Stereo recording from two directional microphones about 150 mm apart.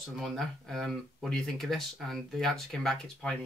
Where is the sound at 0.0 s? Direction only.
Centre (ahead or behind).